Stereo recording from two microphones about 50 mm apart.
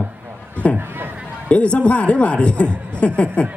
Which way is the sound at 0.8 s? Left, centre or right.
Right.